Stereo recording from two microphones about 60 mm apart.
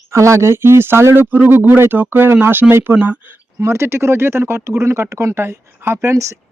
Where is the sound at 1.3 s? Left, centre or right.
Right.